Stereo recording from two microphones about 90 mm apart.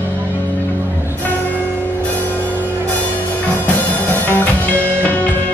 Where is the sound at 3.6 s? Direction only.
20° left (ahead or behind).